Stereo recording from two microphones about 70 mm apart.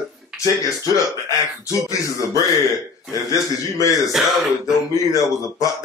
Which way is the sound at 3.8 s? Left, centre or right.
Left.